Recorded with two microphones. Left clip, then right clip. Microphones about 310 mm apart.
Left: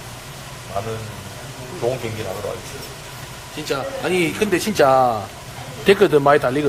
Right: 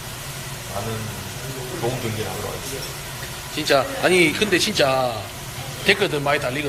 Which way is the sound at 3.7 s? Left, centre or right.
Centre.